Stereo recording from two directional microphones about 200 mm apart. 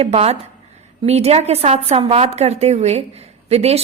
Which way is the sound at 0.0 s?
30° right (ahead or behind).